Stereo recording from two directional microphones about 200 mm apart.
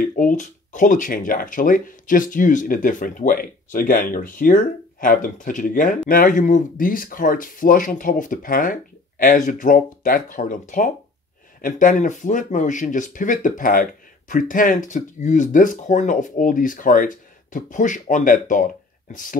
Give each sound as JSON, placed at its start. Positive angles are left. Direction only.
{"t": 0.0, "sound": "speech", "side_deg": 45}
{"t": 11.6, "sound": "speech", "side_deg": 40}